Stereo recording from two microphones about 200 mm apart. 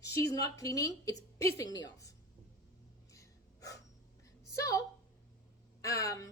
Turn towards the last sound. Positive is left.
turn(degrees=15)  # may be behind; listen again after turning